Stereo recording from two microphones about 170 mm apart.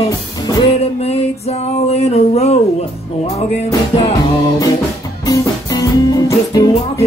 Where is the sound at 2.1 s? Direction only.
40° left (ahead or behind).